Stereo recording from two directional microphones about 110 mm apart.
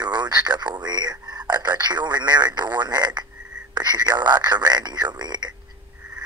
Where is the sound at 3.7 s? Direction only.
40° right (ahead or behind).